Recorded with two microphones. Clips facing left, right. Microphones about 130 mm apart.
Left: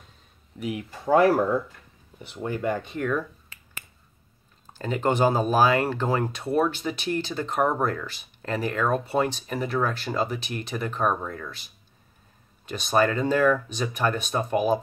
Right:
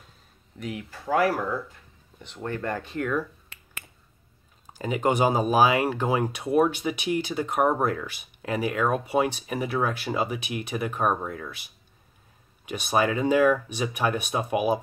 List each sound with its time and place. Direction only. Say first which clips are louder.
0.6 s speech: left 3 dB; 10° left (ahead or behind)
2.2 s speech: left 3 dB; 10° left (ahead or behind)
4.6 s speech: even; 10° right (ahead or behind)